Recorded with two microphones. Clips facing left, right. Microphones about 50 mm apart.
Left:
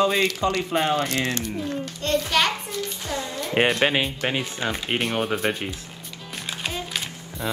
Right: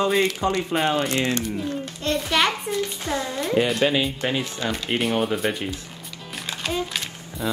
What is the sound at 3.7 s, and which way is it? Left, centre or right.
Speech, left.